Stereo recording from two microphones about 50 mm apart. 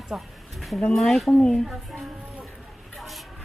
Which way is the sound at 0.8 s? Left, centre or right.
Centre.